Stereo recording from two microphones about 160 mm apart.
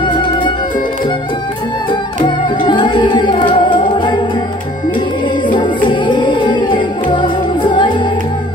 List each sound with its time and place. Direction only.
0.0 s music: 30° left (ahead or behind)
2.2 s music: 30° left (ahead or behind)
5.9 s music: 30° left (ahead or behind)